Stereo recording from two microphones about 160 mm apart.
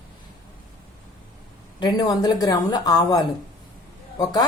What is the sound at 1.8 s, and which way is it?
A woman's voice, 25° left (ahead or behind).